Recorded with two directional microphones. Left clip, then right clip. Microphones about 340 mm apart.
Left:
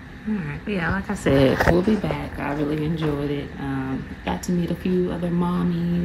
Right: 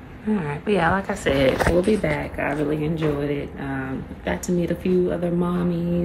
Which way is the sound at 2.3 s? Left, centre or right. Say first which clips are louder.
Right 2 dB; centre.